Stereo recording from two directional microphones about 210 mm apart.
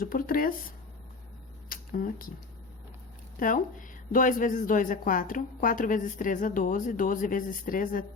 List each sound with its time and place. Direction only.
0.0 s a woman's voice: 40° left (ahead or behind)
1.7 s speech: 45° left (ahead or behind)
3.4 s a woman's voice: 40° left (ahead or behind)